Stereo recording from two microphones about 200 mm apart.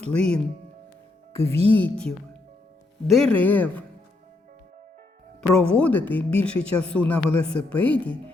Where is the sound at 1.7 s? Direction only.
10° left (ahead or behind).